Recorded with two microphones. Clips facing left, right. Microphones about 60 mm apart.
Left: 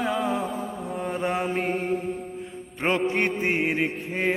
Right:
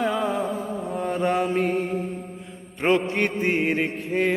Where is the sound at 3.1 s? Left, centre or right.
Centre.